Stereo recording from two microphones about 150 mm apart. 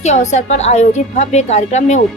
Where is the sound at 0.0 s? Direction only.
50° left (ahead or behind).